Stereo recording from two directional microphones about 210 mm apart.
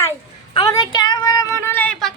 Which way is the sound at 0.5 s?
15° left (ahead or behind).